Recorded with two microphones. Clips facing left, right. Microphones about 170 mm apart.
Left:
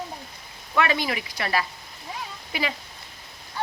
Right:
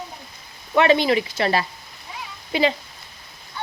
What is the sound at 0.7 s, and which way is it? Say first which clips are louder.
Speech: right 8 dB; 25° right (ahead or behind).